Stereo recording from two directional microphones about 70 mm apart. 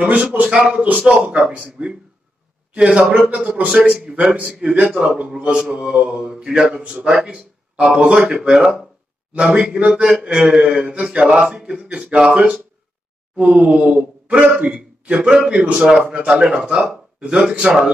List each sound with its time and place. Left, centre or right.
0.0 s a man's voice: centre